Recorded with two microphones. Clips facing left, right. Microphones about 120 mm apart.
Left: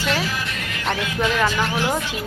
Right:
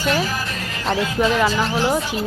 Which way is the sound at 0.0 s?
45° right (ahead or behind).